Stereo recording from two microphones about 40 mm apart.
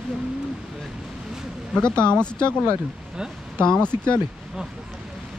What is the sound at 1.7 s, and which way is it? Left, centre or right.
Speech, left.